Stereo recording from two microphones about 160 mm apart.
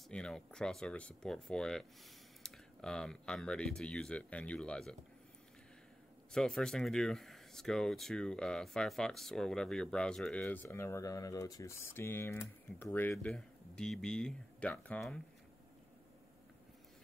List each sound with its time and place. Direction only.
0.1 s speech: 5° left (ahead or behind)
6.3 s speech: 5° left (ahead or behind)